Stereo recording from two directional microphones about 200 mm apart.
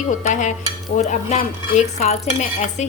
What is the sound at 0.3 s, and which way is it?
Dishes, 40° left (ahead or behind).